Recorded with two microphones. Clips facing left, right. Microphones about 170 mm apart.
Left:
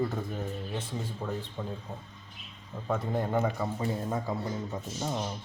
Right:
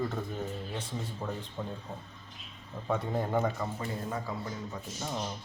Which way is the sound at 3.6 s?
20° left (ahead or behind).